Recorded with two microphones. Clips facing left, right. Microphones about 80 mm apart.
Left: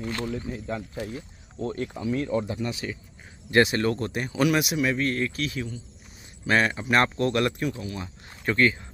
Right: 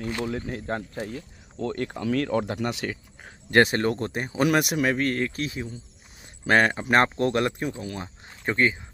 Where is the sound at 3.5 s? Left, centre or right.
Right.